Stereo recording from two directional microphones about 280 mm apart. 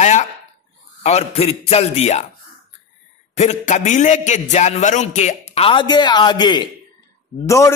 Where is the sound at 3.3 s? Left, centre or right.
Left.